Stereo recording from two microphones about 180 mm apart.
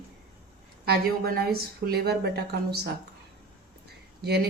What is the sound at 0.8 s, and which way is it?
Speech, 60° right (ahead or behind).